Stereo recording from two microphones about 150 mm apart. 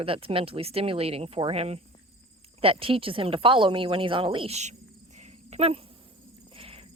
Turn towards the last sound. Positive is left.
turn(degrees=-40)  # may be behind; listen again after turning